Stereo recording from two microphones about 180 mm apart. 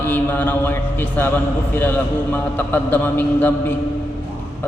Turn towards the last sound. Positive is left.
turn(degrees=10)  # may be behind; listen again after turning